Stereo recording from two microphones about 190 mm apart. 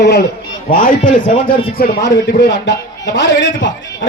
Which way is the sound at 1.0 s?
25° left (ahead or behind).